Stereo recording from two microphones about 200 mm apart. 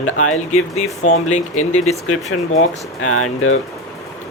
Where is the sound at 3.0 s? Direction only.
90° left.